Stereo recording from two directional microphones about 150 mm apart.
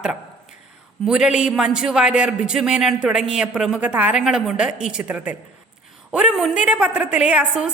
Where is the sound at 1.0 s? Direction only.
5° right (ahead or behind).